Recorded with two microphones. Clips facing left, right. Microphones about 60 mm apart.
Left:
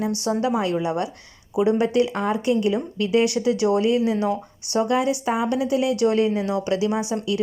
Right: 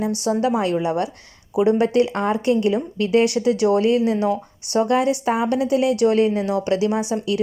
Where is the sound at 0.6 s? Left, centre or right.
Right.